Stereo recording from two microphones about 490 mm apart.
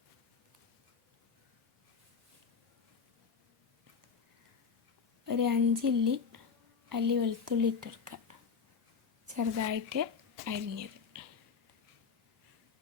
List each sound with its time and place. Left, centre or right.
5.2 s a woman's voice: right
9.3 s a woman's voice: right